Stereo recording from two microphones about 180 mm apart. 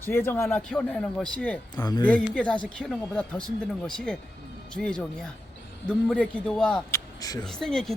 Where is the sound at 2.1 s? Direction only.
5° left (ahead or behind).